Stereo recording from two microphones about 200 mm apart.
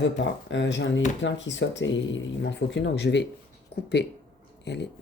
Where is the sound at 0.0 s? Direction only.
65° left (ahead or behind).